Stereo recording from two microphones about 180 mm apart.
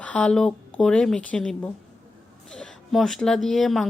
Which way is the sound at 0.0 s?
5° left (ahead or behind).